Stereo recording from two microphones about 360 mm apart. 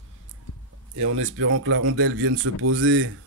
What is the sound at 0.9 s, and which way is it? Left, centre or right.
Speech, right.